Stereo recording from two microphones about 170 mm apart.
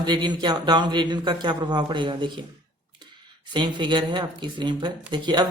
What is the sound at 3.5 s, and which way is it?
Speech, 25° right (ahead or behind).